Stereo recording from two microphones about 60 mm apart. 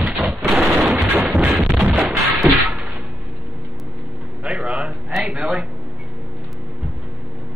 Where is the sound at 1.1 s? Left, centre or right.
Right.